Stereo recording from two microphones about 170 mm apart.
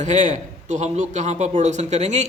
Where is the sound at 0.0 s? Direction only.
45° right (ahead or behind).